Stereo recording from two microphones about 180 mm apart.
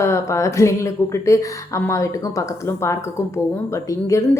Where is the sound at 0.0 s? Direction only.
15° left (ahead or behind).